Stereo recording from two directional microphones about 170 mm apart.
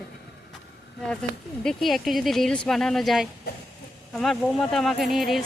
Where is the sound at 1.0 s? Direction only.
5° left (ahead or behind).